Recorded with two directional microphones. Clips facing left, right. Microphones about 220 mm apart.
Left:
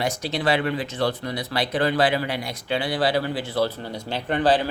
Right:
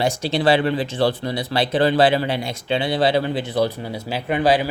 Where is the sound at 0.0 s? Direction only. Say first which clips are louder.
Right 5 dB; 30° right (ahead or behind).